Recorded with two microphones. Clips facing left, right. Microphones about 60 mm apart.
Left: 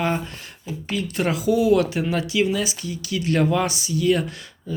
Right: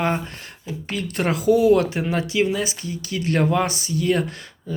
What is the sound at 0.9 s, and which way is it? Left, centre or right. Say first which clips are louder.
Speech: even; right.